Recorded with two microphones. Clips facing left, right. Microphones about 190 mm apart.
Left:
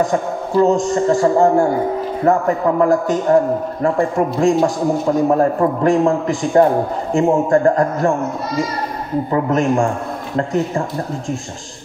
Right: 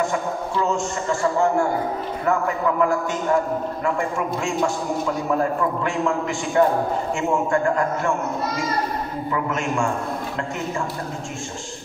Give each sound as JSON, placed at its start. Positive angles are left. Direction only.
{"t": 0.0, "sound": "a man's voice", "side_deg": 35}
{"t": 9.3, "sound": "a man's voice", "side_deg": 35}